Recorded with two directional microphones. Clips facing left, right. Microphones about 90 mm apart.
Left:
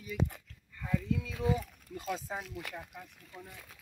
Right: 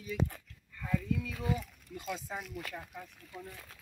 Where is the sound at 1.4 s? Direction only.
5° left (ahead or behind).